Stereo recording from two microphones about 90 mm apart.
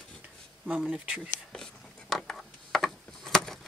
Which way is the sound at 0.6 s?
15° right (ahead or behind).